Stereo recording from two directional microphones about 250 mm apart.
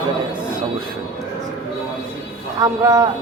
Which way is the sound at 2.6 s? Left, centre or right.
Centre.